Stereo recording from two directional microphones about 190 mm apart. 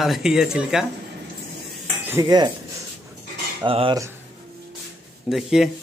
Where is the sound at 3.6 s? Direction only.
25° right (ahead or behind).